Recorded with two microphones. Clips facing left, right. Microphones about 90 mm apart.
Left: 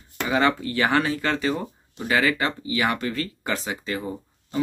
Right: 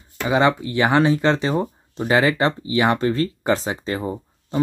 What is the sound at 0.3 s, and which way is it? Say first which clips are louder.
Speech: right 4 dB; 20° right (ahead or behind).